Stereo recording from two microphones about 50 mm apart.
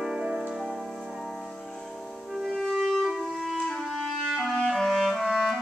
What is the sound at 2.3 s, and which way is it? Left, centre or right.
Music, centre.